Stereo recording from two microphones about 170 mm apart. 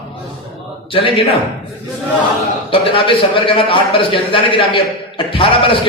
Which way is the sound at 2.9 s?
30° left (ahead or behind).